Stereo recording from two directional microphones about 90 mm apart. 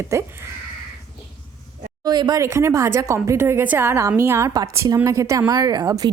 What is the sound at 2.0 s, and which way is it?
Speech, 50° right (ahead or behind).